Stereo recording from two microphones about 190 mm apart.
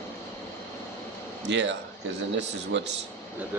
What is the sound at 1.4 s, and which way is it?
A man's voice, 70° right (ahead or behind).